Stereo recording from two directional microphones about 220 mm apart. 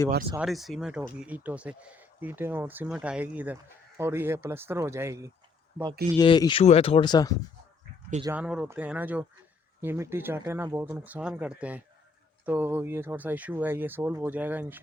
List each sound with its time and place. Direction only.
0.3 s speech: centre (ahead or behind)
6.1 s speech: 20° left (ahead or behind)
8.2 s speech: 10° right (ahead or behind)